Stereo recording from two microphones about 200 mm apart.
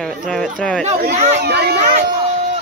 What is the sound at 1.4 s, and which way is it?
Speech, 55° right (ahead or behind).